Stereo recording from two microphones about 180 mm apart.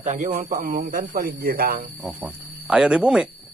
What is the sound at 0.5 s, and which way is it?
Speech, 55° right (ahead or behind).